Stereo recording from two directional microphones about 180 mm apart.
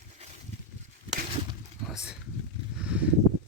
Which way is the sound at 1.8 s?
5° right (ahead or behind).